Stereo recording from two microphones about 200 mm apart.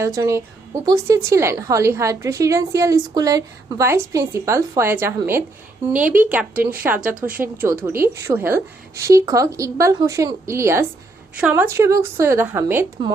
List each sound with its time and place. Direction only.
0.0 s a woman's voice: 15° right (ahead or behind)